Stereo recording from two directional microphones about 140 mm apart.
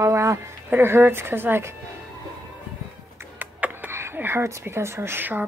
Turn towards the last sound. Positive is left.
turn(degrees=-15)  # may be behind; listen again after turning